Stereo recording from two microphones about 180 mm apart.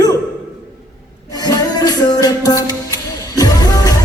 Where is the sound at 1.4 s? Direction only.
20° left (ahead or behind).